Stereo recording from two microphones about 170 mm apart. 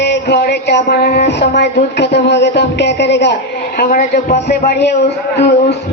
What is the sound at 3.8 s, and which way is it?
A man's voice, 60° left (ahead or behind).